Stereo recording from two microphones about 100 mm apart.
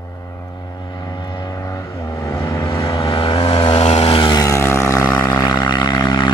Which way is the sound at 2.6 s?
60° left (ahead or behind).